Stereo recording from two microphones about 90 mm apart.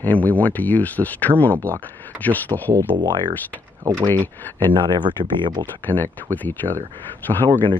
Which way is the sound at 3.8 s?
40° right (ahead or behind).